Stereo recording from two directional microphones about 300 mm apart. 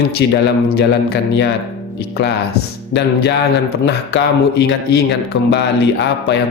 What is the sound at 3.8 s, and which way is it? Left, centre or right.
A man's voice, left.